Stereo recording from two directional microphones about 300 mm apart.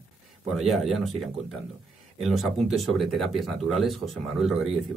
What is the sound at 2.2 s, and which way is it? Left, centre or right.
Speech, centre.